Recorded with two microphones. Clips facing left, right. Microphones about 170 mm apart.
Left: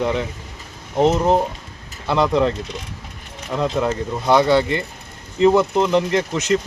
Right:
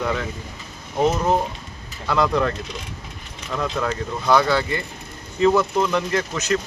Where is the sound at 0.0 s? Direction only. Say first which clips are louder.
Left 3 dB; 20° left (ahead or behind).